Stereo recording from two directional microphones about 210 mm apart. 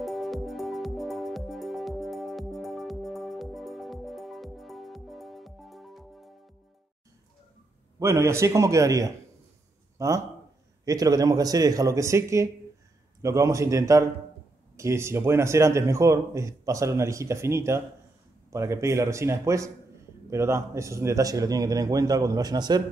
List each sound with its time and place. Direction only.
0.0 s music: centre (ahead or behind)
8.0 s a man's voice: 15° right (ahead or behind)